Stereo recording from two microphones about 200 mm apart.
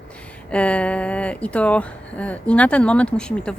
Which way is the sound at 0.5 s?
5° left (ahead or behind).